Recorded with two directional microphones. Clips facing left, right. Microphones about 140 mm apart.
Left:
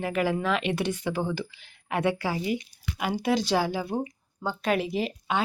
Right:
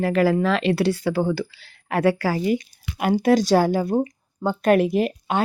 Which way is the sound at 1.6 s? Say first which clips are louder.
Right 6 dB; 35° right (ahead or behind).